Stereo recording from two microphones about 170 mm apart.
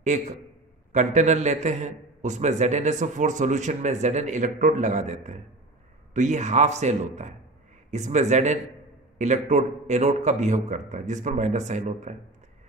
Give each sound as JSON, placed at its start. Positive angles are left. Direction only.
{"t": 0.0, "sound": "a man's voice", "side_deg": -45}